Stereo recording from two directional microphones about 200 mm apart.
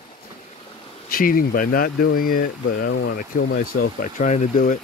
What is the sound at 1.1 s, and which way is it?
Speech, 45° left (ahead or behind).